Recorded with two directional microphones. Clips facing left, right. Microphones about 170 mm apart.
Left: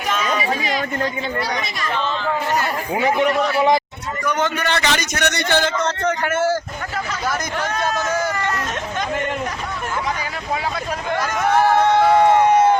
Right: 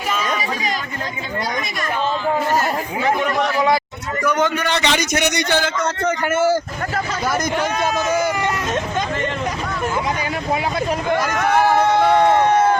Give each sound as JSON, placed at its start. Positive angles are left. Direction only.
{"t": 3.0, "sound": "a man's voice", "side_deg": 20}
{"t": 4.3, "sound": "a man's voice", "side_deg": -10}
{"t": 7.3, "sound": "a man's voice", "side_deg": -15}
{"t": 11.3, "sound": "a sound", "side_deg": 0}